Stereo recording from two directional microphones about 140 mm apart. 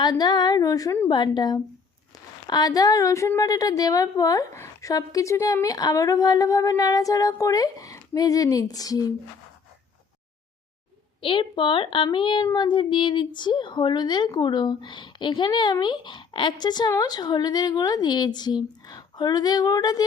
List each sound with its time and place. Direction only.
0.0 s a woman's voice: 30° left (ahead or behind)
11.2 s speech: 40° left (ahead or behind)